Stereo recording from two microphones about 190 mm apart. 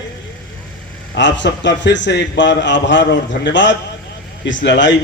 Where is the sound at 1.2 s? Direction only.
70° left (ahead or behind).